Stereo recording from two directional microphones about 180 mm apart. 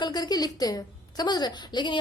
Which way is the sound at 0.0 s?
25° left (ahead or behind).